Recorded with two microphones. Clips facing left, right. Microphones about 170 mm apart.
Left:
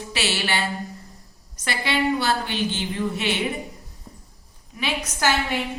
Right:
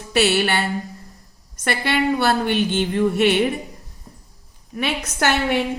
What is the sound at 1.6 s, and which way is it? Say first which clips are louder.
A woman's voice: right 3 dB; 55° right (ahead or behind).